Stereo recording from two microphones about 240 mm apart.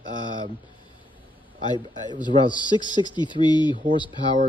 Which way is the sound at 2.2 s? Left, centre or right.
Centre.